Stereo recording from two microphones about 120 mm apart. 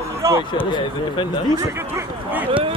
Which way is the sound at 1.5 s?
25° right (ahead or behind).